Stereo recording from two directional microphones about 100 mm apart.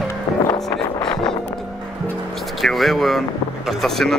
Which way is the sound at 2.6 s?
Centre (ahead or behind).